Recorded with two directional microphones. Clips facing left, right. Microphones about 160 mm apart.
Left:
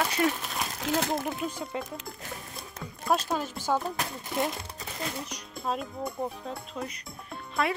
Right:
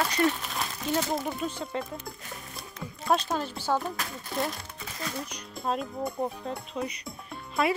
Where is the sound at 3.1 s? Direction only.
5° left (ahead or behind).